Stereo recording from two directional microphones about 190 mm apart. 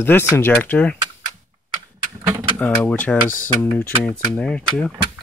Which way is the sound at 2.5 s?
10° left (ahead or behind).